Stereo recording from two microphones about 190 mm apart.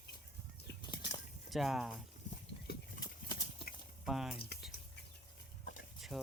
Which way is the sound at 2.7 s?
55° left (ahead or behind).